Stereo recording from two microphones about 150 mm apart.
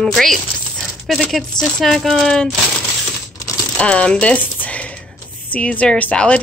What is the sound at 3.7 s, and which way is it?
Speech, 5° left (ahead or behind).